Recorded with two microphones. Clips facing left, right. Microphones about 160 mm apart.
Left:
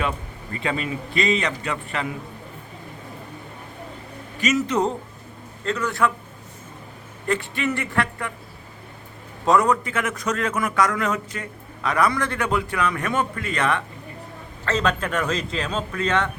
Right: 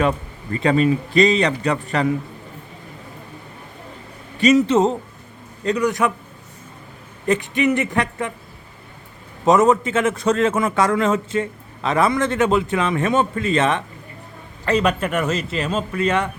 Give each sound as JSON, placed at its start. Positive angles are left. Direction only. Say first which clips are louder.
{"t": 0.6, "sound": "a man's voice", "louder": "right 10 dB", "side_deg": -40}
{"t": 4.4, "sound": "a man's voice", "louder": "right 7 dB", "side_deg": -30}
{"t": 7.3, "sound": "a man's voice", "louder": "right 6 dB", "side_deg": -20}
{"t": 9.4, "sound": "a man's voice", "louder": "right 4 dB", "side_deg": -20}
{"t": 14.6, "sound": "a man's voice", "louder": "right 4 dB", "side_deg": -10}